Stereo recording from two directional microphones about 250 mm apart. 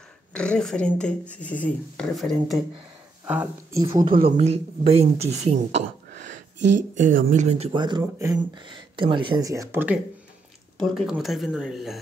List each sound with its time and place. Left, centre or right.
0.3 s speech: centre
4.2 s speech: right
7.0 s speech: right; by 12.0 s centre